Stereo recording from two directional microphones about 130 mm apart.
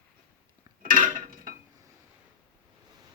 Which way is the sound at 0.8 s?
90° right.